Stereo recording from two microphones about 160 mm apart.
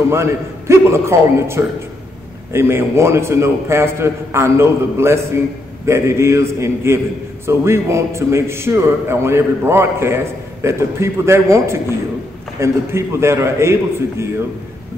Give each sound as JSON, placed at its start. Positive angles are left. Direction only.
{"t": 0.1, "sound": "a man's voice", "side_deg": -15}